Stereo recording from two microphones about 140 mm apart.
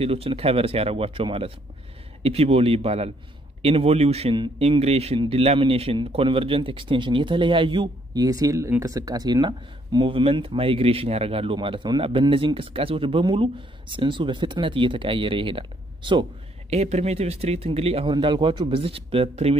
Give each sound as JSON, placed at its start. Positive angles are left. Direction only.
{"t": 0.0, "sound": "a man's voice", "side_deg": -45}
{"t": 16.7, "sound": "speech", "side_deg": -50}
{"t": 18.1, "sound": "a man's voice", "side_deg": -35}